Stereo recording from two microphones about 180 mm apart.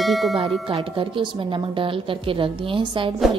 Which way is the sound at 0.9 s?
30° right (ahead or behind).